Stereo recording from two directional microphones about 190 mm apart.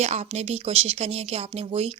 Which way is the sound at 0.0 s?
35° right (ahead or behind).